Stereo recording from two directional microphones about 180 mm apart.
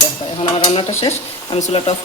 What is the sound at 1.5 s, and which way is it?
Speech, 35° left (ahead or behind).